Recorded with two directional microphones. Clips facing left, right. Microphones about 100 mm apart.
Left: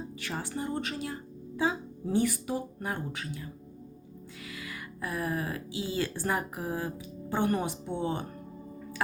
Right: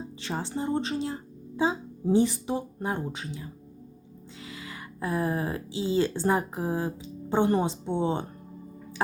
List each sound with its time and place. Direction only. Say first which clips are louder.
0.2 s speech: right 4 dB; 25° right (ahead or behind)